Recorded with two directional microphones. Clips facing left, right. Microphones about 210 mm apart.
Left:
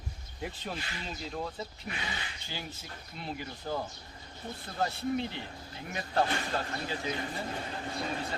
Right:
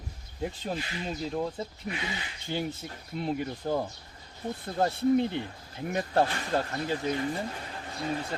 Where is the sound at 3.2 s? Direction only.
55° right (ahead or behind).